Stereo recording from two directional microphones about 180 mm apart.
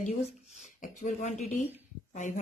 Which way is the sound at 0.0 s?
45° left (ahead or behind).